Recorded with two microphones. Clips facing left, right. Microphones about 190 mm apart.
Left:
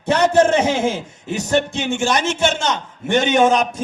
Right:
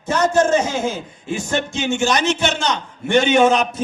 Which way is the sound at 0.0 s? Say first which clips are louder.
Left 2 dB; 65° left (ahead or behind).